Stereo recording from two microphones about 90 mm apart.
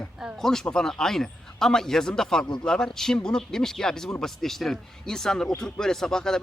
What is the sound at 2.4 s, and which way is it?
Speech, 45° left (ahead or behind).